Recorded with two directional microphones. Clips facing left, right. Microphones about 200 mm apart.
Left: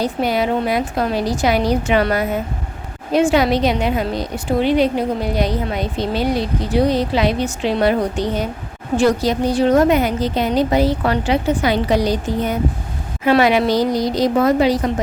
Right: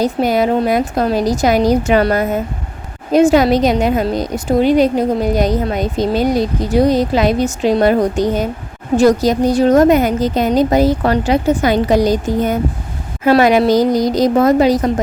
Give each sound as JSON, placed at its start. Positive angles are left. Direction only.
{"t": 0.0, "sound": "a woman's voice", "side_deg": -45}